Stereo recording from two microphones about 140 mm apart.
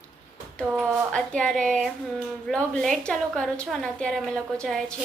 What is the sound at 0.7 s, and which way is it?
Speech, 15° right (ahead or behind).